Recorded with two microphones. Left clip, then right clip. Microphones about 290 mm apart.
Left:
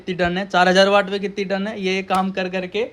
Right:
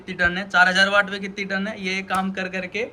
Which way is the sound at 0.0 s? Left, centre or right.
Centre.